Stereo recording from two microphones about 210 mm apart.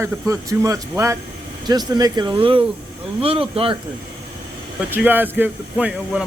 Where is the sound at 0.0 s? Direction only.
15° right (ahead or behind).